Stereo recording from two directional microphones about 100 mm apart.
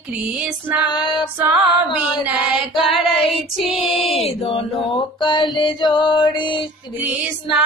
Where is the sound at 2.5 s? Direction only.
5° right (ahead or behind).